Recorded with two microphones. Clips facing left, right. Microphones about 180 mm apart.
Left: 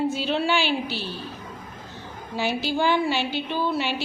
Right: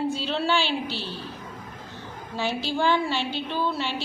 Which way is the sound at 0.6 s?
25° right (ahead or behind).